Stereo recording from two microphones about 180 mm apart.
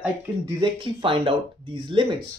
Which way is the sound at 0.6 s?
30° right (ahead or behind).